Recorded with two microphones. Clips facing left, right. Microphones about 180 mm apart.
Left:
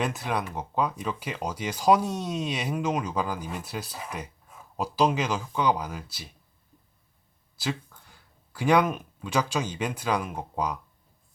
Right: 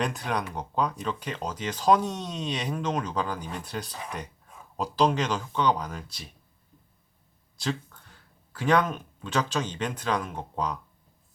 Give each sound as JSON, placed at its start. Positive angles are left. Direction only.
{"t": 0.0, "sound": "speech", "side_deg": 5}
{"t": 7.5, "sound": "speech", "side_deg": 5}